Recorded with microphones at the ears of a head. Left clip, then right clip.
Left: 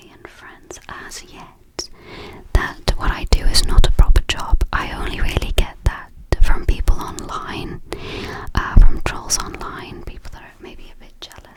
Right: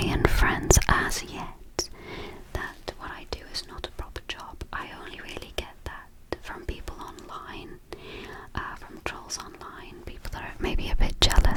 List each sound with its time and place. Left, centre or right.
0.0 s whispering: right
2.5 s whispering: left
10.6 s whispering: right